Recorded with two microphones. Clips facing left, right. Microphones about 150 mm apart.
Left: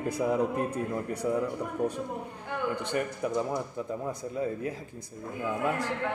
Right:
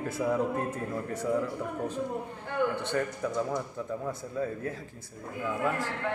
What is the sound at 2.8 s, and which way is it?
A man's voice, 15° left (ahead or behind).